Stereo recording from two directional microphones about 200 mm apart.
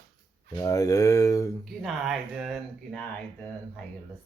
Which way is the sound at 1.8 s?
Centre (ahead or behind).